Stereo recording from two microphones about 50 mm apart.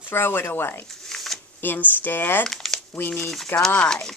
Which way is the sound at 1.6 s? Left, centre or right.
Left.